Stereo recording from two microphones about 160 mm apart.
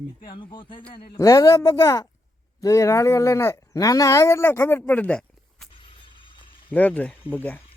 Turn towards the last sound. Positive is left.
turn(degrees=10)  # may be behind; listen again after turning